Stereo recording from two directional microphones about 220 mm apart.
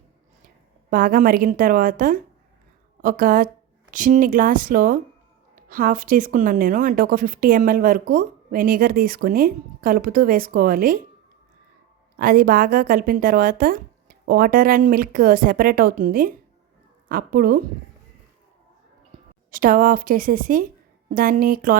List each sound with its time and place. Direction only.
0.9 s speech: 40° right (ahead or behind)
12.1 s speech: 40° right (ahead or behind)
19.5 s speech: 40° right (ahead or behind)